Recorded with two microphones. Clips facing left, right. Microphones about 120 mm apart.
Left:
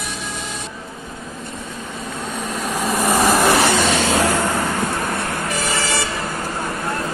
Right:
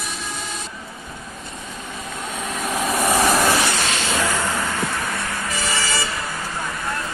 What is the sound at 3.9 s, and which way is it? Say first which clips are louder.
Vehicle: left 5 dB; 45° left (ahead or behind).